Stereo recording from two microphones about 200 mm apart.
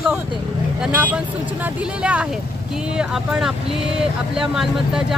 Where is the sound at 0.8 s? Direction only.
10° right (ahead or behind).